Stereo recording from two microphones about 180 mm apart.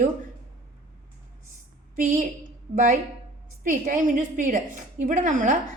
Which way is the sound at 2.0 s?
50° right (ahead or behind).